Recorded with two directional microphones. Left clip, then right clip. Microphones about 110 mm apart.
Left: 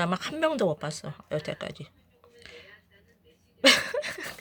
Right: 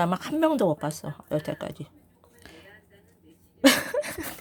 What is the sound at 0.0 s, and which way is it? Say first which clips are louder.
A woman's voice: right 3 dB; 25° right (ahead or behind).